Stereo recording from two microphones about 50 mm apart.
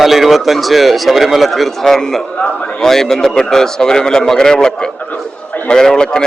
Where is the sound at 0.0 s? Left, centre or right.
Centre.